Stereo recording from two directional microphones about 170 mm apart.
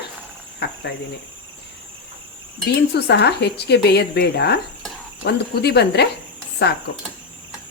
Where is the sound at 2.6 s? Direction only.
80° left.